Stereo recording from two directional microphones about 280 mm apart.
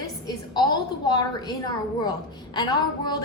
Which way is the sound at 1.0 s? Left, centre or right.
Centre.